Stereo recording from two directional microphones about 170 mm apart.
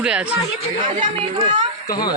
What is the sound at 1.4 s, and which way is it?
Speech, 45° right (ahead or behind).